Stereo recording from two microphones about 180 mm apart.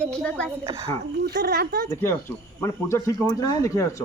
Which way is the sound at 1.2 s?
60° right (ahead or behind).